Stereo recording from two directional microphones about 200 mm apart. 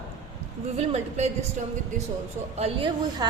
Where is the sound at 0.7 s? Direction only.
35° right (ahead or behind).